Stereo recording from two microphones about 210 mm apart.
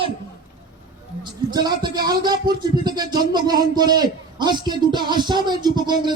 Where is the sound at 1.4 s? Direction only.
20° right (ahead or behind).